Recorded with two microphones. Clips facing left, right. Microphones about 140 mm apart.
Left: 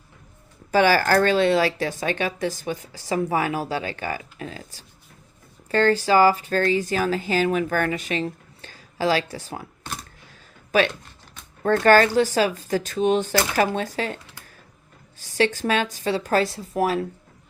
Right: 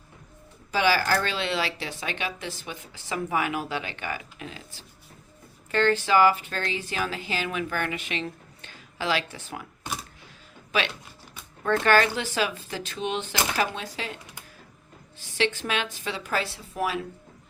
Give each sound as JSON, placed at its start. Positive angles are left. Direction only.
{"t": 0.7, "sound": "speech", "side_deg": 50}
{"t": 9.8, "sound": "a sound", "side_deg": -5}
{"t": 10.7, "sound": "speech", "side_deg": 45}
{"t": 15.2, "sound": "speech", "side_deg": 40}